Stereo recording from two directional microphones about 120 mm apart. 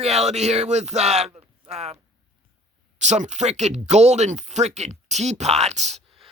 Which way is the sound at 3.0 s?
75° right (ahead or behind).